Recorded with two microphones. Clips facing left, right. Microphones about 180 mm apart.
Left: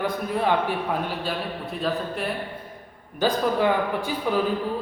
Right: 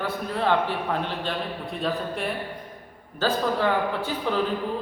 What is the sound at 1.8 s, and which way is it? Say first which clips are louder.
Speech: left 1 dB; centre (ahead or behind).